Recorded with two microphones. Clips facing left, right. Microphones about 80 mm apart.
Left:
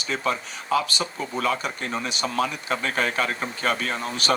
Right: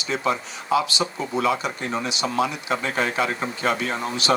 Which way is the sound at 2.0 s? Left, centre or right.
Left.